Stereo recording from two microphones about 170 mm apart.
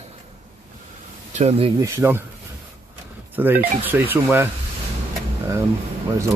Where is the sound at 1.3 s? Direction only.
40° right (ahead or behind).